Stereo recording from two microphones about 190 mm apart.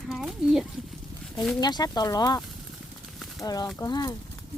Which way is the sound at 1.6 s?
20° left (ahead or behind).